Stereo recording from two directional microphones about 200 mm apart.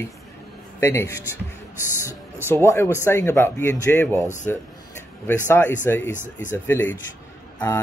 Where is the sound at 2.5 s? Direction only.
15° left (ahead or behind).